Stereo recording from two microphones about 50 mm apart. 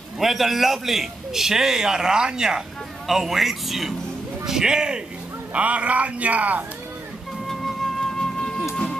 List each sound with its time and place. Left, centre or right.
0.2 s a man's voice: centre
5.5 s a man's voice: right
7.4 s music: centre